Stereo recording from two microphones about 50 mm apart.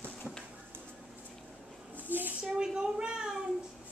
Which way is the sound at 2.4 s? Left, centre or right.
Centre.